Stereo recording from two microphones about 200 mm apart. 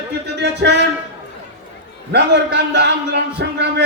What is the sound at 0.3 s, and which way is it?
Speech, 60° right (ahead or behind).